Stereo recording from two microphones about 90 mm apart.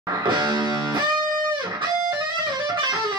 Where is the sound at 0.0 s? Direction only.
55° right (ahead or behind).